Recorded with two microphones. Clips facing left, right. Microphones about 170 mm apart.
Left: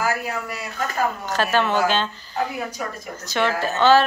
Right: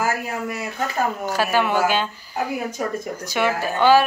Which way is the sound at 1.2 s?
10° right (ahead or behind).